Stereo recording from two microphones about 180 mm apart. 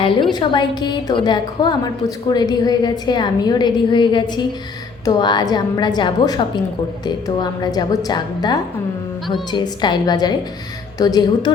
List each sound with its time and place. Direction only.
0.0 s a woman's voice: 25° left (ahead or behind)